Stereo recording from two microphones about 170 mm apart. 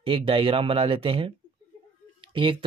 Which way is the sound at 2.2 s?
30° right (ahead or behind).